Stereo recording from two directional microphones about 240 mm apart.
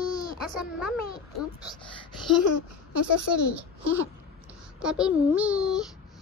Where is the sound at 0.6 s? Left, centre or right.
Centre.